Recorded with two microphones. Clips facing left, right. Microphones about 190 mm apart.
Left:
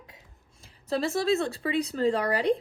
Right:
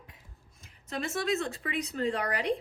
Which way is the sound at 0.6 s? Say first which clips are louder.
Left 7 dB; 35° left (ahead or behind).